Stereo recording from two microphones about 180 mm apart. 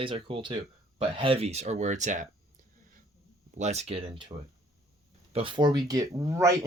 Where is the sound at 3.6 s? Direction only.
35° right (ahead or behind).